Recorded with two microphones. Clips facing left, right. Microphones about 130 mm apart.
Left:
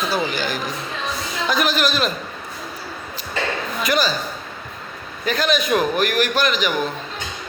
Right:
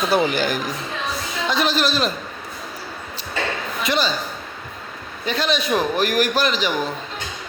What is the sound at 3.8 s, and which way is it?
Speech, 25° right (ahead or behind).